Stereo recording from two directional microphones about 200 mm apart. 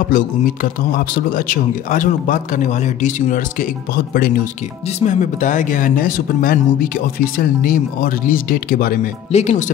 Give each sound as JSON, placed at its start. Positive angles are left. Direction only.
{"t": 0.1, "sound": "speech", "side_deg": 45}